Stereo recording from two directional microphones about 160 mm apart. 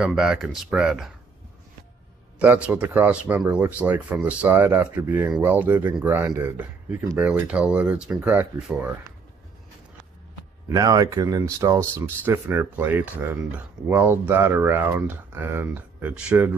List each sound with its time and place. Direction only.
0.0 s speech: 5° right (ahead or behind)
2.3 s speech: 10° right (ahead or behind)
10.7 s speech: 20° right (ahead or behind)